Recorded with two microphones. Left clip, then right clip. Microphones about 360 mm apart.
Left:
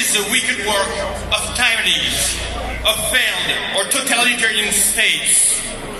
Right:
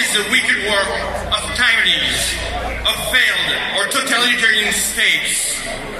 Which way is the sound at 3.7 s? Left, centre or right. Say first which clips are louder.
Right 1 dB; centre.